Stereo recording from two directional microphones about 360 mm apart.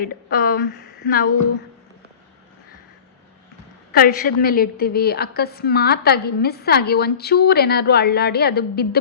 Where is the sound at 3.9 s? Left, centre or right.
Left.